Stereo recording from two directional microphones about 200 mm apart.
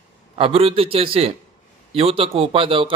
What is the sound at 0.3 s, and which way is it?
A man's voice, 30° right (ahead or behind).